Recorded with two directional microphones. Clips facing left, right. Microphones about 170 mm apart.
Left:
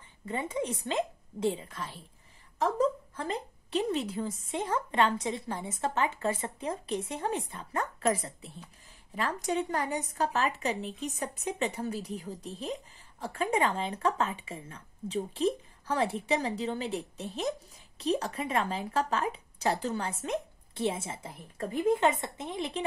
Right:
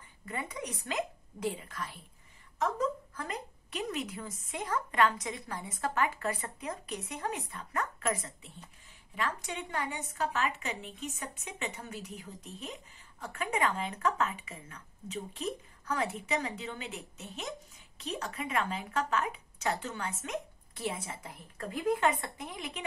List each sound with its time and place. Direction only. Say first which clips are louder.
0.2 s a woman's voice: left 6 dB; 25° left (ahead or behind)